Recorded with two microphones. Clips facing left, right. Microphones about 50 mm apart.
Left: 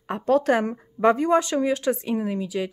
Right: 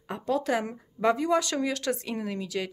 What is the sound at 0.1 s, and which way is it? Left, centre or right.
A woman's voice, left.